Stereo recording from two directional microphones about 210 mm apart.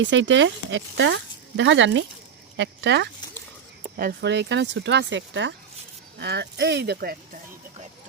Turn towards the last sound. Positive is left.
turn(degrees=-45)  # may be behind; listen again after turning